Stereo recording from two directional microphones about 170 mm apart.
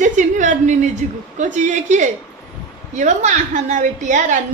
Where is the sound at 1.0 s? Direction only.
45° right (ahead or behind).